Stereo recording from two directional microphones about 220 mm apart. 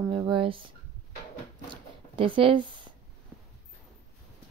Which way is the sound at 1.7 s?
25° right (ahead or behind).